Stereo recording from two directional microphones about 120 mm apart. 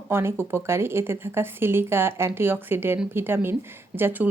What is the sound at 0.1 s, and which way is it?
Speech, 20° right (ahead or behind).